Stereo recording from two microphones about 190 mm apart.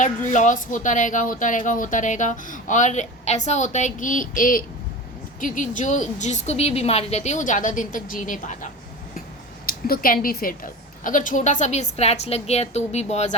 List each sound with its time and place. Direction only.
0.0 s a woman's voice: 40° left (ahead or behind)